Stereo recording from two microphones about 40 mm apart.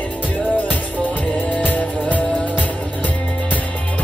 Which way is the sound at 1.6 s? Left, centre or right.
Left.